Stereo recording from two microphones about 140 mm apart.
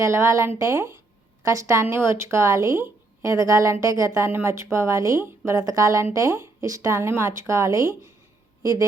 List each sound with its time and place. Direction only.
0.0 s speech: 20° right (ahead or behind)